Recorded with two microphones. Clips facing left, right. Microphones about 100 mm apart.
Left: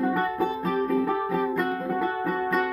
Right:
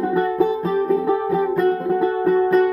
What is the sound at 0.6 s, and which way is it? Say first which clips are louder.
Music: right 6 dB; 30° right (ahead or behind).